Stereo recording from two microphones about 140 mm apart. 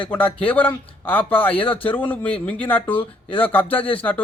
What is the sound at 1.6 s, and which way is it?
Speech, 40° left (ahead or behind).